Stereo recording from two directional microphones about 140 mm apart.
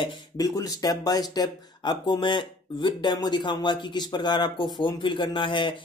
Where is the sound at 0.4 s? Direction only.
25° left (ahead or behind).